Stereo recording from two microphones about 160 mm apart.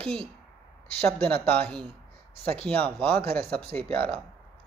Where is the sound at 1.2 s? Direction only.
10° left (ahead or behind).